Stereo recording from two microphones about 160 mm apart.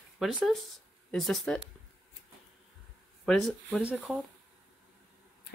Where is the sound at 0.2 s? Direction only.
Centre (ahead or behind).